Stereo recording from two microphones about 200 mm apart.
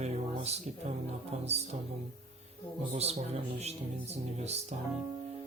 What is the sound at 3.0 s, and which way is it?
Speech, 30° right (ahead or behind).